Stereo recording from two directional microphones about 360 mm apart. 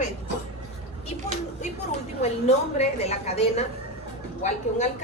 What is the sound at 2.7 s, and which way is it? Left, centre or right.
A woman's voice, centre.